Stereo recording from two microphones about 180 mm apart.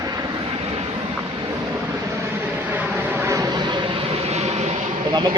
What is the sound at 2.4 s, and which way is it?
Vehicle, 10° right (ahead or behind).